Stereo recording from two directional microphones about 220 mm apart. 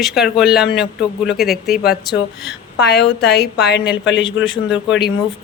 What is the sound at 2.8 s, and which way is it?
A woman's voice, 50° left (ahead or behind).